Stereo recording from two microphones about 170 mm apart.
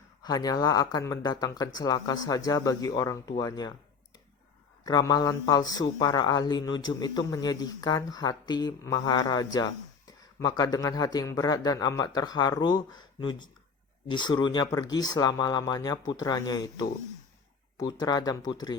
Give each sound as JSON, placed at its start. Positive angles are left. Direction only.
{"t": 0.2, "sound": "a man's voice", "side_deg": 20}
{"t": 4.8, "sound": "a man's voice", "side_deg": 20}